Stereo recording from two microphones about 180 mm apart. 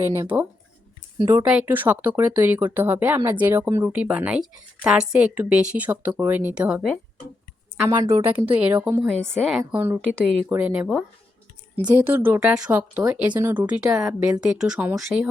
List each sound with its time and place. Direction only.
1.2 s a woman's voice: 15° right (ahead or behind)
7.8 s a woman's voice: 15° right (ahead or behind)
11.8 s a woman's voice: 15° right (ahead or behind)